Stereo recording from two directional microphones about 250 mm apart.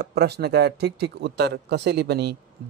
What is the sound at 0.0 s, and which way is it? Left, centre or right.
A man's voice, right.